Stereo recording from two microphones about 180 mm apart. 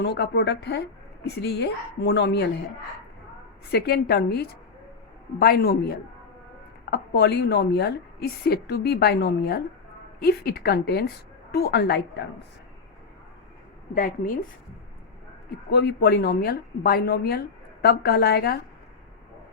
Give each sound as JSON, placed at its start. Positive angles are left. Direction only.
{"t": 0.0, "sound": "speech", "side_deg": 70}
{"t": 3.7, "sound": "a woman's voice", "side_deg": 60}
{"t": 13.9, "sound": "a woman's voice", "side_deg": 50}
{"t": 15.7, "sound": "a woman's voice", "side_deg": 65}